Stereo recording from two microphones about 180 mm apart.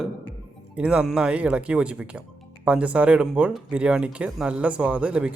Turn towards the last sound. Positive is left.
turn(degrees=-5)  # may be behind; listen again after turning